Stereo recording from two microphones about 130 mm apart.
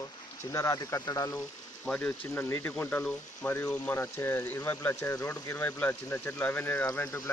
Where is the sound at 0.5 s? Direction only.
20° left (ahead or behind).